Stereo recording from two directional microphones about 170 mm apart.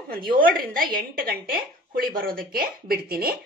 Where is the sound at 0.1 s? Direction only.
60° right (ahead or behind).